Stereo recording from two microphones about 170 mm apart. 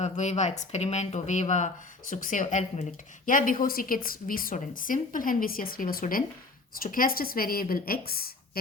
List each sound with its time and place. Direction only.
0.0 s a woman's voice: 40° left (ahead or behind); by 8.3 s 60° left (ahead or behind)